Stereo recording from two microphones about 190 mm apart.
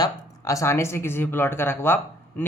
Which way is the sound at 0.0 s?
15° left (ahead or behind).